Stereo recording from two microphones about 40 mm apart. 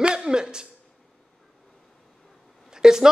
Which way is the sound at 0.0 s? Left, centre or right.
Right.